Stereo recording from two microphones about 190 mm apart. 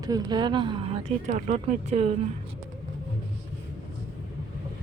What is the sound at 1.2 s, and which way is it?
Speech, 40° right (ahead or behind).